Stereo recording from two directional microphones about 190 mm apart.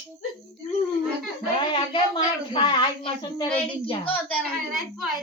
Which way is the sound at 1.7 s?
25° left (ahead or behind).